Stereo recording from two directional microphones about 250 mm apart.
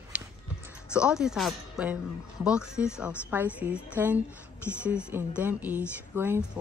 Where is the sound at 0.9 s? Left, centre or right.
Centre.